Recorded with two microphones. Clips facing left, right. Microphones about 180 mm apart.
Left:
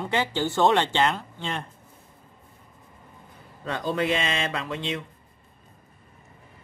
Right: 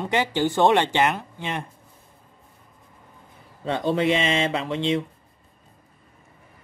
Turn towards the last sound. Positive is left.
turn(degrees=-25)  # may be behind; listen again after turning